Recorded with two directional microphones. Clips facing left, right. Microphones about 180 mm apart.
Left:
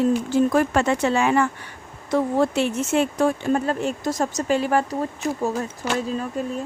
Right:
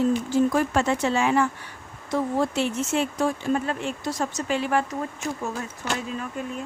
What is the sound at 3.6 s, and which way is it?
Speech, 40° left (ahead or behind).